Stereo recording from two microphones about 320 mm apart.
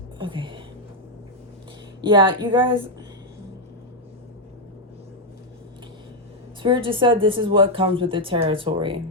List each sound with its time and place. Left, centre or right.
0.2 s a sound: centre
2.0 s speech: centre
6.6 s speech: centre